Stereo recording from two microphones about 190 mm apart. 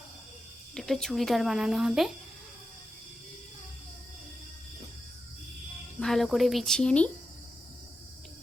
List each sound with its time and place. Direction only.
0.7 s speech: 5° left (ahead or behind)
6.0 s speech: centre (ahead or behind)